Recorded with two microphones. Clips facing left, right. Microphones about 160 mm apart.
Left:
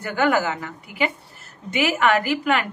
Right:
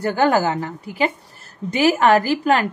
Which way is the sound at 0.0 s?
35° right (ahead or behind).